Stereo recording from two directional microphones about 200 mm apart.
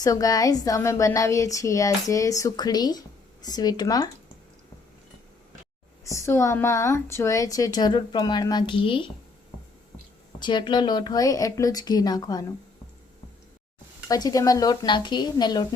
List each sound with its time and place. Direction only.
0.0 s a woman's voice: 15° left (ahead or behind)
6.1 s a woman's voice: 15° left (ahead or behind)
10.4 s a woman's voice: 25° left (ahead or behind)
14.1 s a woman's voice: 20° left (ahead or behind)